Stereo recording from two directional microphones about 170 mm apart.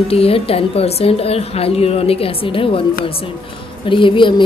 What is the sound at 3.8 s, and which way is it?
Speech, 30° left (ahead or behind).